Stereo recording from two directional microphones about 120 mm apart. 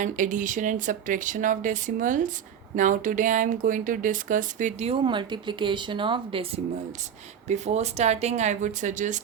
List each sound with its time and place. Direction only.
0.0 s speech: 90° right
5.0 s speech: 40° right (ahead or behind)
7.4 s speech: 70° right (ahead or behind); by 9.2 s 90° right